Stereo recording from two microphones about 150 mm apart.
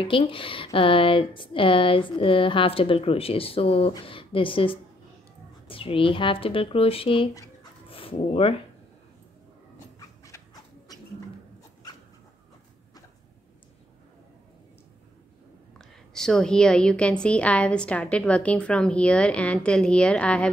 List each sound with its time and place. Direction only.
0.0 s speech: 35° left (ahead or behind)
9.9 s dog: 20° left (ahead or behind)
15.8 s a woman's voice: 5° left (ahead or behind)